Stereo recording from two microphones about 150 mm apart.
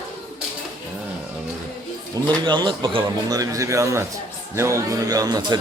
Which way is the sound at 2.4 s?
30° right (ahead or behind).